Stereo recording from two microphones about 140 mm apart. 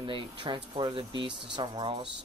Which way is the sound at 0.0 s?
35° right (ahead or behind).